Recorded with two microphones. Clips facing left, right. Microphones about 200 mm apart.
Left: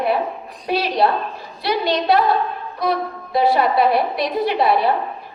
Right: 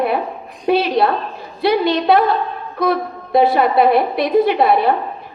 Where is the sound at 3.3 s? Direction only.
55° right (ahead or behind).